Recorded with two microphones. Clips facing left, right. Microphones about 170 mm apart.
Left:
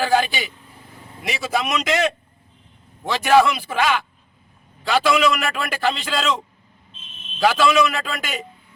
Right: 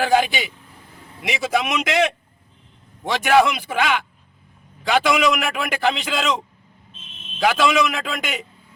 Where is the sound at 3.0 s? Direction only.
15° right (ahead or behind).